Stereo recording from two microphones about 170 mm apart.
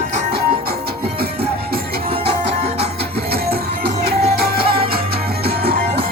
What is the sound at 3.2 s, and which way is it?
Music, 65° right (ahead or behind).